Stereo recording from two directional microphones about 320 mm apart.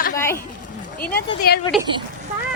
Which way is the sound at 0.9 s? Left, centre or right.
Left.